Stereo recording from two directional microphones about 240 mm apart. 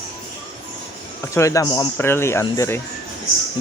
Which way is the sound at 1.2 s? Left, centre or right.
Centre.